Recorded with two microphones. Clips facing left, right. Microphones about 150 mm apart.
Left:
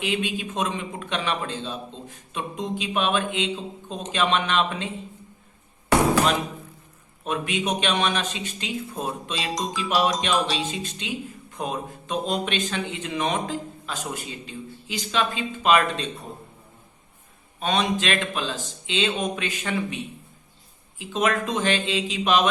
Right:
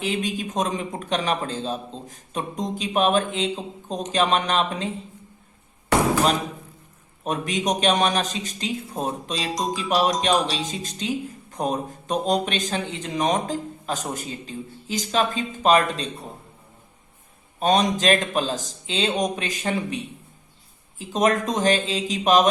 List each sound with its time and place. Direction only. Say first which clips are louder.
0.0 s a man's voice: right 1 dB; 40° right (ahead or behind)
7.3 s a man's voice: right 2 dB; 40° right (ahead or behind)
17.6 s a man's voice: right 4 dB; 40° right (ahead or behind)
21.0 s a man's voice: right 3 dB; 40° right (ahead or behind)